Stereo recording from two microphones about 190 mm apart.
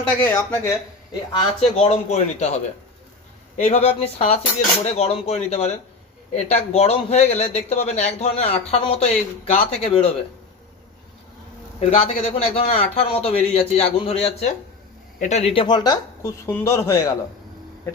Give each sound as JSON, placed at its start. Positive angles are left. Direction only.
{"t": 0.3, "sound": "speech", "side_deg": 15}
{"t": 1.4, "sound": "a man's voice", "side_deg": 30}
{"t": 3.6, "sound": "a man's voice", "side_deg": 35}
{"t": 11.8, "sound": "a man's voice", "side_deg": 30}